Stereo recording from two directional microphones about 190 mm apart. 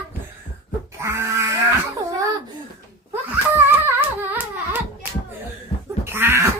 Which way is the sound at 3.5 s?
10° right (ahead or behind).